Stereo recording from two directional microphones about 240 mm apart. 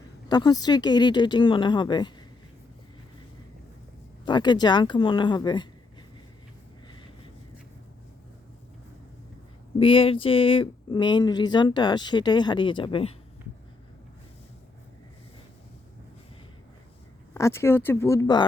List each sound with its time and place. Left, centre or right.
0.3 s speech: centre
4.3 s speech: centre
9.7 s speech: left
17.3 s speech: centre